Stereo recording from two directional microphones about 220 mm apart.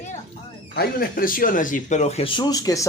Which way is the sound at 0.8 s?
40° left (ahead or behind).